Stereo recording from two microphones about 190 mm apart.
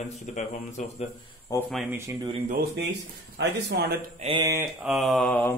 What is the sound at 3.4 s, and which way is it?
Speech, 60° right (ahead or behind).